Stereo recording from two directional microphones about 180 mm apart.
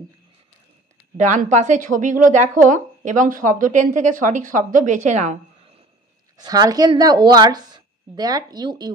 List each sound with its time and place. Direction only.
1.1 s speech: 40° right (ahead or behind)
6.3 s a woman's voice: 20° right (ahead or behind)